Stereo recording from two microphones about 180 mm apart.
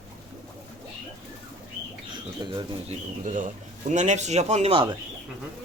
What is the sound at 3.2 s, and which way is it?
A man's voice, 45° right (ahead or behind).